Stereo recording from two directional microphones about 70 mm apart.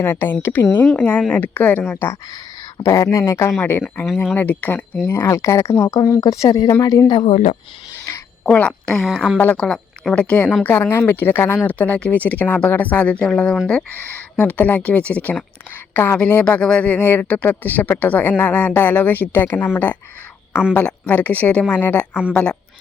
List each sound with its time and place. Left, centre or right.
0.0 s a woman's voice: left
1.9 s a woman's voice: left
2.7 s speech: left
3.6 s a woman's voice: left
5.3 s speech: left
5.8 s speech: left
6.5 s speech: left
6.8 s speech: left
8.4 s a woman's voice: centre
8.9 s a woman's voice: centre
10.2 s a woman's voice: centre
10.7 s a woman's voice: left; by 22.5 s centre